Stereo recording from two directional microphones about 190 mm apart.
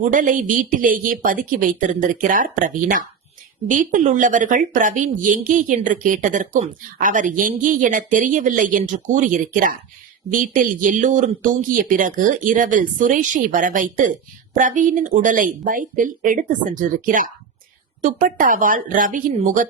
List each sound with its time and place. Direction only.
0.0 s speech: 45° right (ahead or behind)